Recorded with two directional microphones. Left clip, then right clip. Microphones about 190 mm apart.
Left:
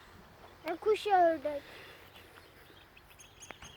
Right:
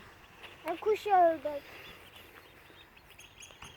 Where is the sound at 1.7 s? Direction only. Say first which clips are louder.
Right 2 dB; 10° left (ahead or behind).